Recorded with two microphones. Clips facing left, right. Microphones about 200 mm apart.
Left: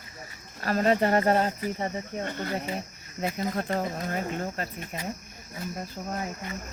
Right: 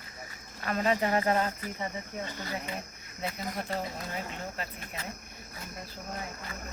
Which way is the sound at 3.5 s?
50° left (ahead or behind).